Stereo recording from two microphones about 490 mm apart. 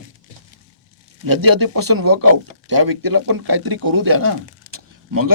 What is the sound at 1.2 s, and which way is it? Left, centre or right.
Speech, right.